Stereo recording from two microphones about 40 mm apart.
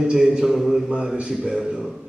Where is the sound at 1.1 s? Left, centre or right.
Right.